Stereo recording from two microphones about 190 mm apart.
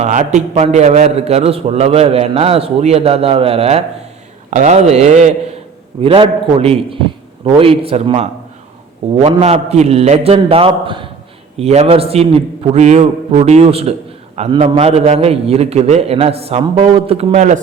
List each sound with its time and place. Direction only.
0.0 s a man's voice: 40° right (ahead or behind)